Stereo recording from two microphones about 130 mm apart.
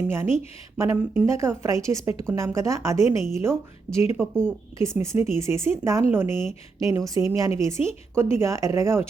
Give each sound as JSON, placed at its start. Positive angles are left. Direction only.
{"t": 0.1, "sound": "a woman's voice", "side_deg": -20}
{"t": 3.9, "sound": "speech", "side_deg": -10}
{"t": 4.4, "sound": "a woman's voice", "side_deg": -20}